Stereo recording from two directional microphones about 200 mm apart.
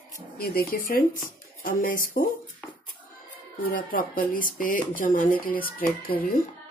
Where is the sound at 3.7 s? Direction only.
45° left (ahead or behind).